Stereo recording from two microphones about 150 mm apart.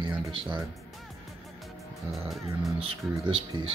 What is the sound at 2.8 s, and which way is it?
Speech, 35° right (ahead or behind).